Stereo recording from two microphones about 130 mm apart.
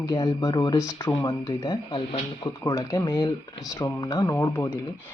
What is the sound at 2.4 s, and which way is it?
Speech, 25° left (ahead or behind).